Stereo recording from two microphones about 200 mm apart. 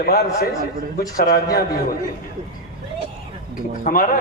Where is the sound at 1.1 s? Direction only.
50° left (ahead or behind).